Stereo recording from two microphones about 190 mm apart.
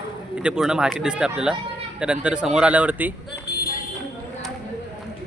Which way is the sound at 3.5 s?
55° left (ahead or behind).